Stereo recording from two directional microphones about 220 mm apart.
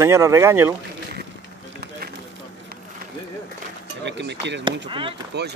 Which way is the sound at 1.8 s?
45° right (ahead or behind).